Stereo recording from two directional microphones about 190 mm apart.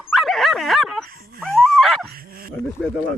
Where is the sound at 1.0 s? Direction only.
50° right (ahead or behind).